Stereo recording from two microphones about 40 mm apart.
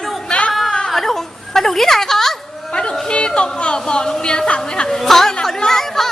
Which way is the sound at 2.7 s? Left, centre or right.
Left.